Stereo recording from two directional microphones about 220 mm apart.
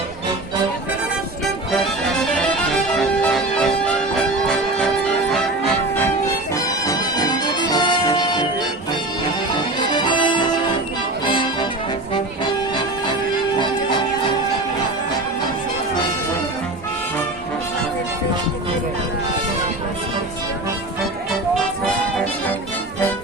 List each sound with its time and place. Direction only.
1.8 s music: 5° left (ahead or behind)
6.5 s music: 15° left (ahead or behind)
9.6 s music: 20° left (ahead or behind)